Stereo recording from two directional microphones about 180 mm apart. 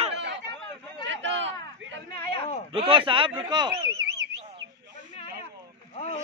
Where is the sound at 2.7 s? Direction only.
30° right (ahead or behind).